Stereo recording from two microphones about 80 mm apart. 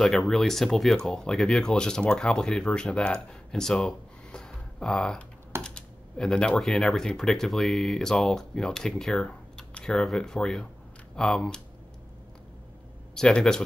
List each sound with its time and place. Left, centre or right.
0.0 s speech: centre
13.1 s speech: centre